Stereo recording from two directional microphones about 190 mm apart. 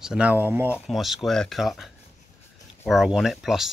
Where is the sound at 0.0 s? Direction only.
5° right (ahead or behind).